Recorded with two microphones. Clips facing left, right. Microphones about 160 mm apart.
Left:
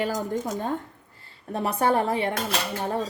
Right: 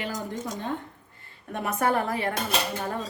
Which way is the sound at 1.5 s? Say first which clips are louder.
Left 2 dB; 30° left (ahead or behind).